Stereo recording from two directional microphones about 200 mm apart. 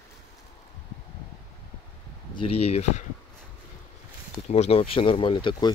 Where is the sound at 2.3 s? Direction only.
25° left (ahead or behind).